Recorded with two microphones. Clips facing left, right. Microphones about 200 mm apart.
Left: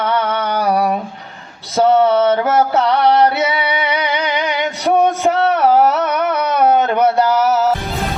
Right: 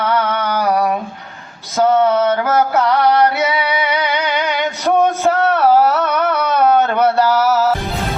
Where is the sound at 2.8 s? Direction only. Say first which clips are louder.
Left 1 dB; 20° left (ahead or behind).